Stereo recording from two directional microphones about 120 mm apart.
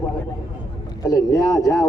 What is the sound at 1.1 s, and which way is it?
Speech, 30° left (ahead or behind).